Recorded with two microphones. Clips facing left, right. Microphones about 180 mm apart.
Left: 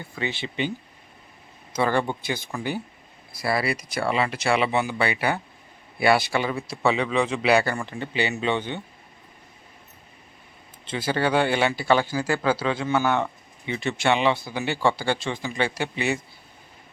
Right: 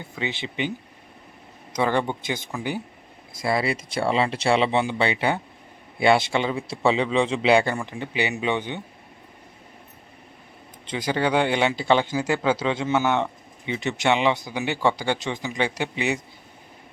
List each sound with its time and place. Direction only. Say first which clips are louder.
0.0 s speech: even; 15° right (ahead or behind)
1.7 s speech: even; 15° right (ahead or behind)
10.8 s speech: even; 15° right (ahead or behind)